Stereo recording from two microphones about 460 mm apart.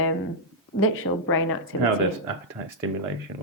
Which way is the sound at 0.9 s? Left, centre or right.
Left.